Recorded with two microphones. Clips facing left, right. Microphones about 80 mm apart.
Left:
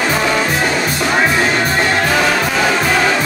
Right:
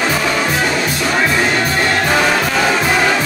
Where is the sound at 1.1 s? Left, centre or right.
Centre.